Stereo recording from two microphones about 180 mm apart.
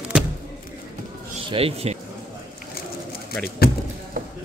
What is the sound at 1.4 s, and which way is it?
Speech, 30° right (ahead or behind).